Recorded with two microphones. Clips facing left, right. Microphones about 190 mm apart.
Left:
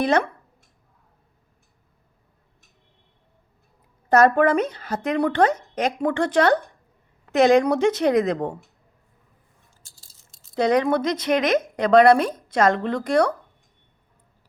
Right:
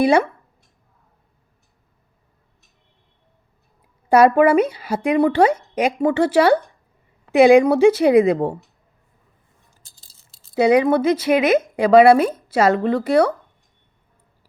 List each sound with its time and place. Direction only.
0.0 s a woman's voice: 10° right (ahead or behind)
4.1 s a woman's voice: 10° right (ahead or behind)
9.8 s a sound: 35° right (ahead or behind)
10.5 s a woman's voice: 10° right (ahead or behind)